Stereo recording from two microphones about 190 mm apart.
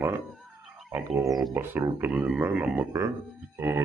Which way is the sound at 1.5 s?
10° right (ahead or behind).